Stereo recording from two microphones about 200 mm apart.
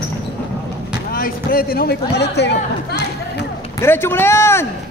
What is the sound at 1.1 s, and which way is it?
Speech, 45° left (ahead or behind).